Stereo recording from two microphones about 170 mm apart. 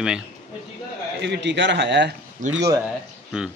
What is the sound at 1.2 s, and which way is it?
Speech, 90° right.